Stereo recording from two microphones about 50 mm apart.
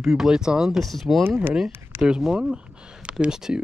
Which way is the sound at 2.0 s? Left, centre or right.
Centre.